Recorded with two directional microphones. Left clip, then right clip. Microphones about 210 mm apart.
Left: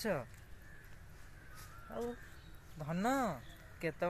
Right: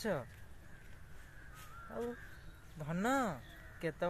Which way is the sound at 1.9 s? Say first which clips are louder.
Even; 5° right (ahead or behind).